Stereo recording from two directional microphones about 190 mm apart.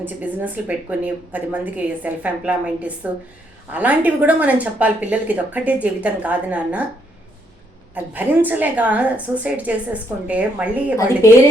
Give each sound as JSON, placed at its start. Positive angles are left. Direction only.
{"t": 0.0, "sound": "speech", "side_deg": -10}
{"t": 7.9, "sound": "speech", "side_deg": -10}